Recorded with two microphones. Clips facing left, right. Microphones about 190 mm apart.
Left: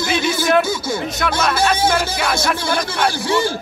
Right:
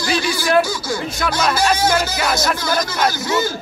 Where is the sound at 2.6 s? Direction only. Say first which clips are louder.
Even; 30° left (ahead or behind).